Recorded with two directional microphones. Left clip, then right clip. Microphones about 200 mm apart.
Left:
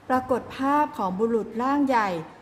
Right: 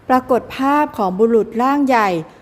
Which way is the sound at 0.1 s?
35° right (ahead or behind).